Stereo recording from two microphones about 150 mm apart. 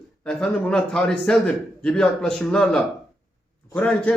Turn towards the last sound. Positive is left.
turn(degrees=10)  # may be behind; listen again after turning